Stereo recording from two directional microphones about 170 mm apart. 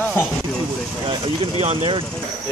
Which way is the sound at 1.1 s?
30° right (ahead or behind).